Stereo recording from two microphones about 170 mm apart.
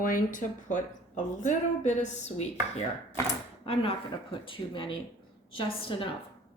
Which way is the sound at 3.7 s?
35° left (ahead or behind).